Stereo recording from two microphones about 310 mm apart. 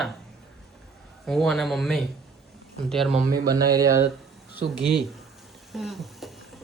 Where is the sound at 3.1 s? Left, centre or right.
Right.